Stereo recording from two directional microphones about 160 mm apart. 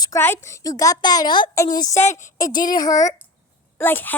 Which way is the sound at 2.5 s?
60° left (ahead or behind).